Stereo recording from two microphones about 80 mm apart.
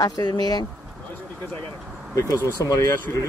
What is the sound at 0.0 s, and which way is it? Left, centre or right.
Speech, left.